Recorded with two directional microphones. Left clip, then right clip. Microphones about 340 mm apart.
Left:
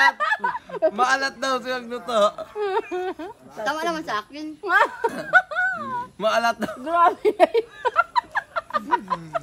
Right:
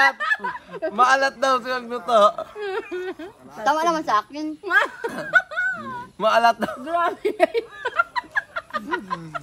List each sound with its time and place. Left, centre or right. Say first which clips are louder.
0.2 s speech: left 1 dB; centre
0.9 s a man's voice: right 4 dB; centre
2.6 s speech: left 5 dB; centre
3.6 s a woman's voice: right 5 dB; centre
4.6 s speech: left 2 dB; centre
5.3 s snicker: left 1 dB; centre
6.1 s a man's voice: right 4 dB; centre
6.8 s a sound: left 4 dB; centre